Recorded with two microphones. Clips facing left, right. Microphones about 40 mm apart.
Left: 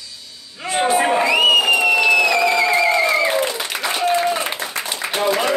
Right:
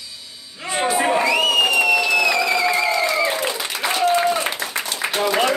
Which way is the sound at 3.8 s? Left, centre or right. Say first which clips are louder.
Right 1 dB; centre.